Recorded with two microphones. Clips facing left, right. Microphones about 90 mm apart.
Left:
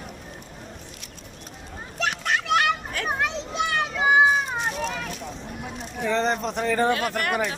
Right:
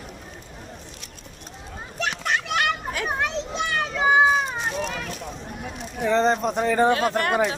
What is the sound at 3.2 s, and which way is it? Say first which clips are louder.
Children playing: even; 5° left (ahead or behind).